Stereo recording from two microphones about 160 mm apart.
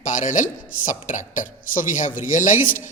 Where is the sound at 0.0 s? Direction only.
55° left (ahead or behind).